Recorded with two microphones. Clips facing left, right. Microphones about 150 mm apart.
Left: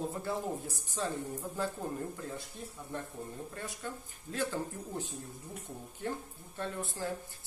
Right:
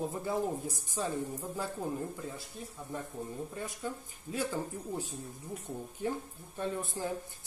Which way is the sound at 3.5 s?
10° right (ahead or behind).